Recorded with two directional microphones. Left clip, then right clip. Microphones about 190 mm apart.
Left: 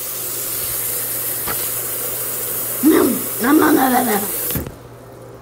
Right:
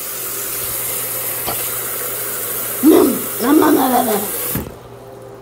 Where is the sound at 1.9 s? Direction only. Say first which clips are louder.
Right 2 dB; 10° right (ahead or behind).